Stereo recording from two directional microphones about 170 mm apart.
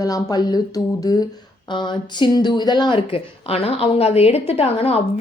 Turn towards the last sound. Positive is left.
turn(degrees=35)  # may be behind; listen again after turning